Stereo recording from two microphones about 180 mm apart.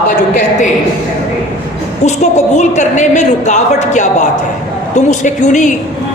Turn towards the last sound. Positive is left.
turn(degrees=45)  # may be behind; listen again after turning